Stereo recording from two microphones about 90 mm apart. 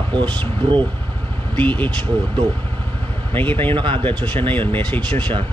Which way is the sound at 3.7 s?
70° right (ahead or behind).